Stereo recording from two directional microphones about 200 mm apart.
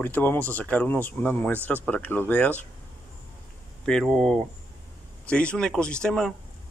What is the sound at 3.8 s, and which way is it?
Speech, 5° left (ahead or behind).